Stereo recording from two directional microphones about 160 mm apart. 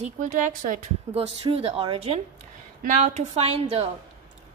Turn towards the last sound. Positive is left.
turn(degrees=-40)  # may be behind; listen again after turning